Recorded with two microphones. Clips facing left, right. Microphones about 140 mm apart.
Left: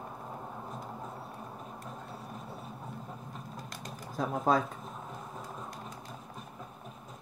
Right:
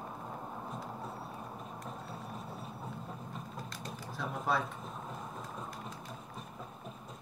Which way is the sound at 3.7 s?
45° left (ahead or behind).